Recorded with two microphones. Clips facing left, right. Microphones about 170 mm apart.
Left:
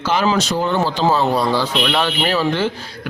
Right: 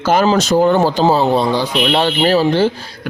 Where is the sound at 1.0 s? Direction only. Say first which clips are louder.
Right 3 dB; 30° right (ahead or behind).